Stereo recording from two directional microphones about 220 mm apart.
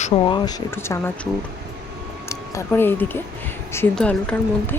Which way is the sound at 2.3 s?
10° left (ahead or behind).